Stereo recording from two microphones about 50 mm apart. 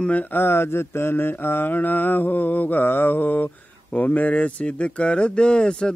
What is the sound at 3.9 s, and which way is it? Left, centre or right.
Speech, left.